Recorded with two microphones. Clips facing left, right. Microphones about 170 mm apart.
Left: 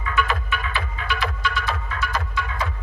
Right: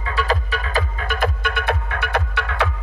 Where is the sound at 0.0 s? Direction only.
35° right (ahead or behind).